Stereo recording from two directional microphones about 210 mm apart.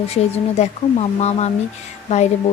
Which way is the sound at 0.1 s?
30° left (ahead or behind).